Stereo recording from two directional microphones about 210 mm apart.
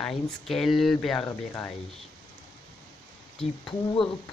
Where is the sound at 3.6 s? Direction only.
25° left (ahead or behind).